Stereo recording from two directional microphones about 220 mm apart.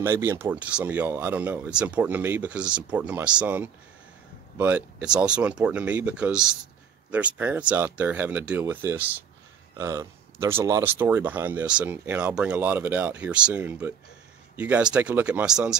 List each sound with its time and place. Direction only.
0.0 s speech: 10° right (ahead or behind)